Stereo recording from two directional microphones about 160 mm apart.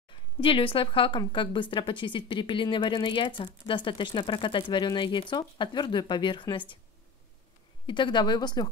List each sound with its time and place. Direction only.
0.1 s a woman's voice: 35° left (ahead or behind)
7.8 s a woman's voice: 30° left (ahead or behind)